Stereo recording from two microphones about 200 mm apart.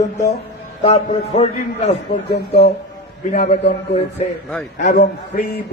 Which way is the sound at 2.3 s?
55° left (ahead or behind).